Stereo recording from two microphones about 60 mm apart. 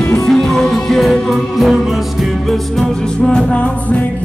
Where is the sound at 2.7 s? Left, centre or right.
Centre.